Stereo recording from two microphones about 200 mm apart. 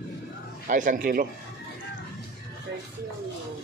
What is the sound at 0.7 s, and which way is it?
Speech, 40° right (ahead or behind).